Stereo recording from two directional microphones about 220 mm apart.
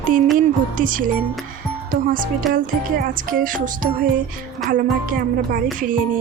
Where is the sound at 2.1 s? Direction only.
40° right (ahead or behind).